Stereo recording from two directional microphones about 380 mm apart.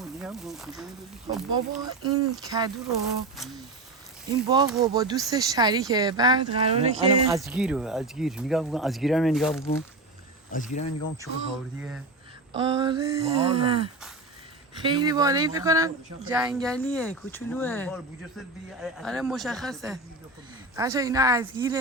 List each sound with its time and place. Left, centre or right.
0.0 s speech: centre
7.3 s speech: centre
10.5 s speech: centre
12.5 s speech: centre